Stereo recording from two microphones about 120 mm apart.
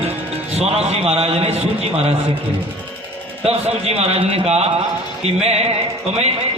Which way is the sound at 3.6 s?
60° right (ahead or behind).